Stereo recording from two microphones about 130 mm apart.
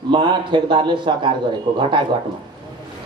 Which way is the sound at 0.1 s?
40° right (ahead or behind).